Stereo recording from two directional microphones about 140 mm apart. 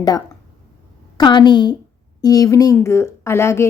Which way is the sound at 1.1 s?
30° left (ahead or behind).